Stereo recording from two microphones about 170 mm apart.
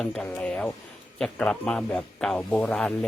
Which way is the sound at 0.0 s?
5° left (ahead or behind).